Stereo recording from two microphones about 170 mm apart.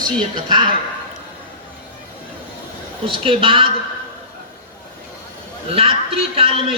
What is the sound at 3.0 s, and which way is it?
Speech, 30° right (ahead or behind).